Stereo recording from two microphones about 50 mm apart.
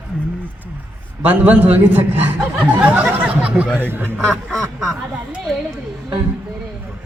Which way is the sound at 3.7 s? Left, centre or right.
Right.